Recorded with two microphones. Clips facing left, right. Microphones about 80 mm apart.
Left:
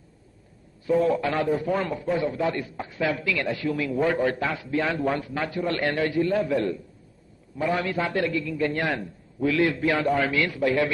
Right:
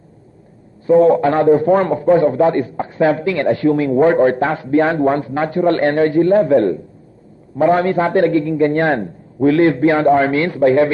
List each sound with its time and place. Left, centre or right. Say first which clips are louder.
0.8 s a man's voice: right 11 dB; right